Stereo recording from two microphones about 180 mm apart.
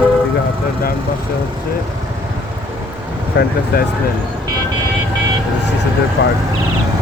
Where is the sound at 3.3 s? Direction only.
80° left.